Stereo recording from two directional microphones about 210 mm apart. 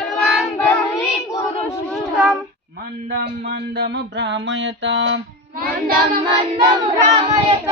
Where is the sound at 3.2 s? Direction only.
50° right (ahead or behind).